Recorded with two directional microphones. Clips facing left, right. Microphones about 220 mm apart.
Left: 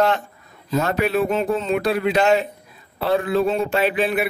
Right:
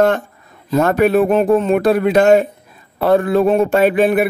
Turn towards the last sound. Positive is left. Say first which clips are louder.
# right 7 dB
turn(degrees=-50)  # may be behind; listen again after turning